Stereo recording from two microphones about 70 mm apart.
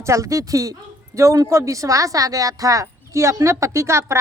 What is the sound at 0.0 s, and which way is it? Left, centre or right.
Speech, right.